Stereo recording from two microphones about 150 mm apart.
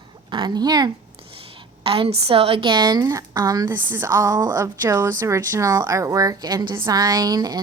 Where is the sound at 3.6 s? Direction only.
15° right (ahead or behind).